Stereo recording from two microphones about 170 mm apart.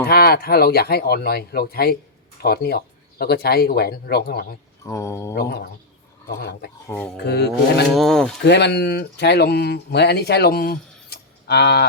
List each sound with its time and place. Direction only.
0.0 s speech: 65° left (ahead or behind)
4.9 s mantra: 15° left (ahead or behind)
5.3 s speech: 70° left (ahead or behind)
6.8 s mantra: 10° left (ahead or behind)
7.3 s speech: 75° left (ahead or behind)
7.9 s speech: 5° left (ahead or behind)
8.4 s speech: 85° left